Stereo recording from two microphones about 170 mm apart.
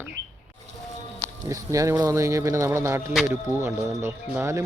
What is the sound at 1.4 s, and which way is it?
Speech, 20° right (ahead or behind).